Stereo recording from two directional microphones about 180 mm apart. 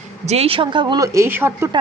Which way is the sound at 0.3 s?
35° right (ahead or behind).